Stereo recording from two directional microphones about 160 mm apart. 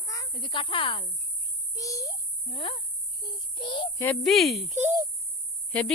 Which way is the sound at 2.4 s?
35° left (ahead or behind).